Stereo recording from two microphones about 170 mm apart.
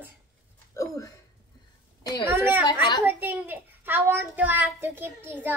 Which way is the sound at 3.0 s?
10° right (ahead or behind).